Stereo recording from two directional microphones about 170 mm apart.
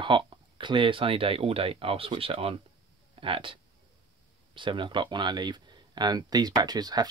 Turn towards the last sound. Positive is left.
turn(degrees=-25)  # may be behind; listen again after turning